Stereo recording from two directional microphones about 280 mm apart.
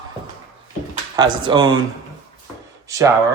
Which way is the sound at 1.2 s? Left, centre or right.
Centre.